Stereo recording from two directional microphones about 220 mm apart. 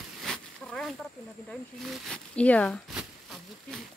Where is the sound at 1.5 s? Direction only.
Centre (ahead or behind).